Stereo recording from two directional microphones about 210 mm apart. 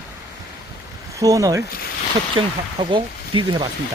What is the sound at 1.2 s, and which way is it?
Speech, 15° right (ahead or behind).